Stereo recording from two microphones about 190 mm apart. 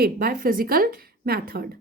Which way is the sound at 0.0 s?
50° right (ahead or behind).